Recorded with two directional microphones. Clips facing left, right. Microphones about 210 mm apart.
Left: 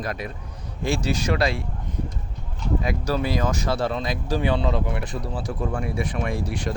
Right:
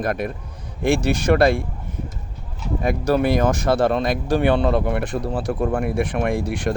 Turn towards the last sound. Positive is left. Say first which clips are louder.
# right 5 dB
turn(degrees=-55)  # may be behind; listen again after turning